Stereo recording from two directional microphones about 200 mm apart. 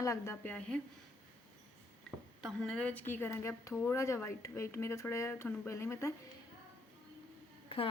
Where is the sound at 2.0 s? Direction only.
5° left (ahead or behind).